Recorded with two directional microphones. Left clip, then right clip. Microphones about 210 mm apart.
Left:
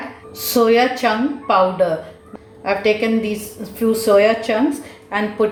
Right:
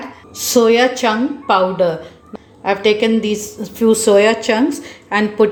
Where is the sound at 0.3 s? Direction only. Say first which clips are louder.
Right 2 dB; 35° right (ahead or behind).